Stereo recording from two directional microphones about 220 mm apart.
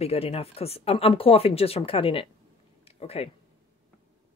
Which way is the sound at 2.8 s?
25° left (ahead or behind).